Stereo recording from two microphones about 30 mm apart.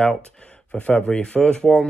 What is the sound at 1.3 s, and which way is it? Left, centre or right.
Speech, left.